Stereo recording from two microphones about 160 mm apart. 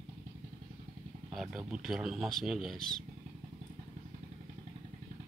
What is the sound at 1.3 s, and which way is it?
Speech, centre (ahead or behind).